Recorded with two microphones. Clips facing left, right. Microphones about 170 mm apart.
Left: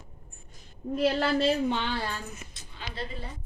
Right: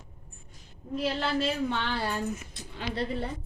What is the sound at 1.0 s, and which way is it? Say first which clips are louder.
Speech: left 4 dB; 40° left (ahead or behind).